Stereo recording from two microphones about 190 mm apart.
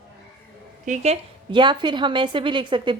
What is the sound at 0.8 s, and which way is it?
A woman's voice, 40° right (ahead or behind).